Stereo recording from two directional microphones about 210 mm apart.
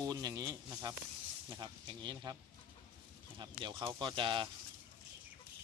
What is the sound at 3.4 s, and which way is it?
A man's voice, 20° right (ahead or behind).